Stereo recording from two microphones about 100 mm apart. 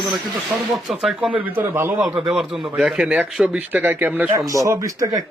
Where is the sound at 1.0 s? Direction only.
10° right (ahead or behind).